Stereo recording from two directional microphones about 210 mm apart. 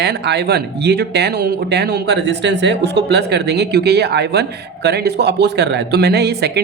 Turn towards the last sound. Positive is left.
turn(degrees=-50)  # may be behind; listen again after turning